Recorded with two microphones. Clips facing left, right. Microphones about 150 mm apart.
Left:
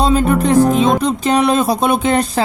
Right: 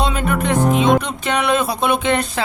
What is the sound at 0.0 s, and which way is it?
Music, 35° left (ahead or behind).